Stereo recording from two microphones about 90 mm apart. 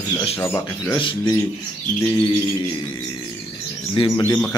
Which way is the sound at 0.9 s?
65° left (ahead or behind).